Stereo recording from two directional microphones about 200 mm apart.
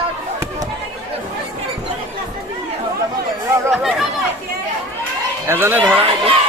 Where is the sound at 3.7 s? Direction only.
Centre (ahead or behind).